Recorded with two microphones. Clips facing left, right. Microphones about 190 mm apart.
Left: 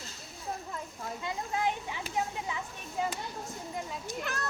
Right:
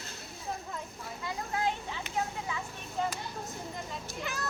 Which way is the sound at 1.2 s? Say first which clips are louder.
Even; 20° left (ahead or behind).